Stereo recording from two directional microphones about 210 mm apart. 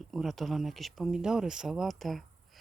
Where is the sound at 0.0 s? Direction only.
Centre (ahead or behind).